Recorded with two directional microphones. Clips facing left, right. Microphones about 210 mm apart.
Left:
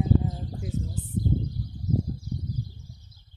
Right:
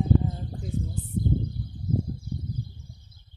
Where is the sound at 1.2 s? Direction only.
55° right (ahead or behind).